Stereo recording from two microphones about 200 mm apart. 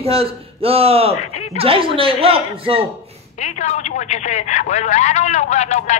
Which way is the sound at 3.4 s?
35° left (ahead or behind).